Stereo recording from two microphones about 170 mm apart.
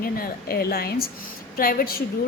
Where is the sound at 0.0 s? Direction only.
60° left (ahead or behind).